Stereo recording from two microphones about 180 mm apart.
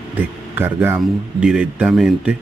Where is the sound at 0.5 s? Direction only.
10° right (ahead or behind).